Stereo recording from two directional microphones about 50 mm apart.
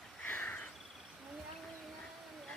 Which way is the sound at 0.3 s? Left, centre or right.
Left.